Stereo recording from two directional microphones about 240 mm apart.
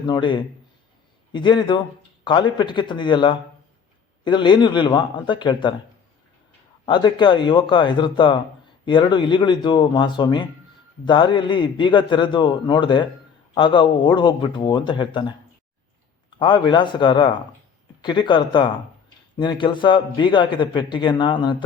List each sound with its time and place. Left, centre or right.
0.1 s a man's voice: centre
6.8 s a man's voice: centre
16.4 s a man's voice: centre